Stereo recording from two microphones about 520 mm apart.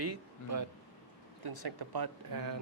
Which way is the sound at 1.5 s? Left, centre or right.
Right.